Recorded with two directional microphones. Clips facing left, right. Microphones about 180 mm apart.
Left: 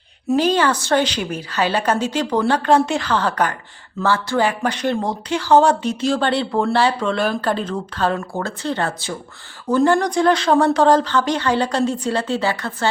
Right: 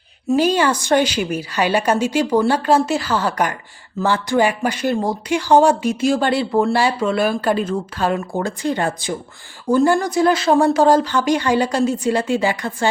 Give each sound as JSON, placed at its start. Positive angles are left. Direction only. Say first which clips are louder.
{"t": 0.3, "sound": "speech", "louder": "right 1 dB", "side_deg": -10}